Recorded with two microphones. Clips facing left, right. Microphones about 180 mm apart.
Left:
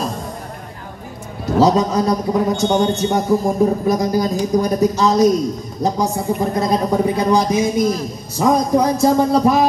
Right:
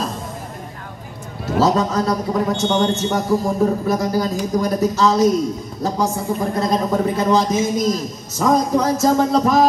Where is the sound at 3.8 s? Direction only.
15° left (ahead or behind).